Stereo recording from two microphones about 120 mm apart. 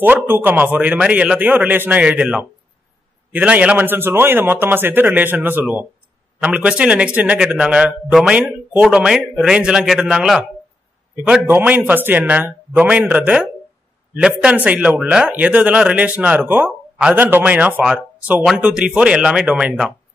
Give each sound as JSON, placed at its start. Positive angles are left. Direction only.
{"t": 0.0, "sound": "a man's voice", "side_deg": -15}
{"t": 11.4, "sound": "speech", "side_deg": -15}